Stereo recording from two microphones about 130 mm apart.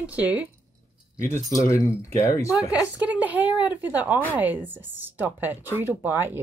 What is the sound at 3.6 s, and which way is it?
A woman's voice, 15° right (ahead or behind).